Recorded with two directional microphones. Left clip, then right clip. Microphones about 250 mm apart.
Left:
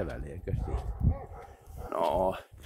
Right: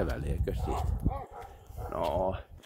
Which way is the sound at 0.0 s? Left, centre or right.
Centre.